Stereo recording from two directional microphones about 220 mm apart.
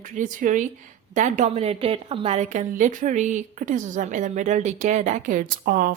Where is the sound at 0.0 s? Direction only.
35° right (ahead or behind).